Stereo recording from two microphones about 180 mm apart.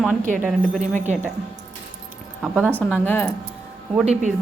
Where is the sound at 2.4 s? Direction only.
5° right (ahead or behind).